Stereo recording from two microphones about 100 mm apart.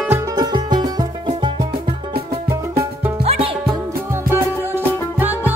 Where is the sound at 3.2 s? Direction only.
75° right (ahead or behind).